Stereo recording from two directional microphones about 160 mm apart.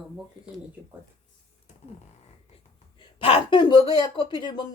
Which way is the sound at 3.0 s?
35° left (ahead or behind).